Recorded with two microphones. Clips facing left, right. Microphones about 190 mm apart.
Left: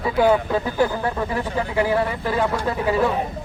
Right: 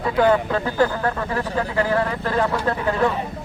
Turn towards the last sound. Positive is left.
turn(degrees=5)  # may be behind; listen again after turning